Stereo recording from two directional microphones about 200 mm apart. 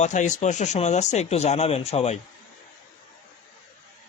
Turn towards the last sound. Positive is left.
turn(degrees=30)  # may be behind; listen again after turning